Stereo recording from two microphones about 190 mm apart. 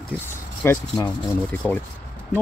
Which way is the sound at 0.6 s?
15° left (ahead or behind).